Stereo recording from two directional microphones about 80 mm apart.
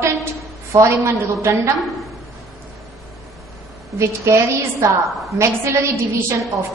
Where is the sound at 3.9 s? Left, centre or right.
Right.